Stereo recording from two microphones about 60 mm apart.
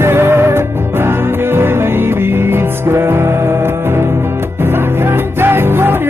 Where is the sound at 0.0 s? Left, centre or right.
Right.